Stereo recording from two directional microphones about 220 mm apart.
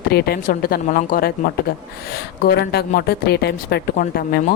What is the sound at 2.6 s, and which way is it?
A woman's voice, 45° left (ahead or behind).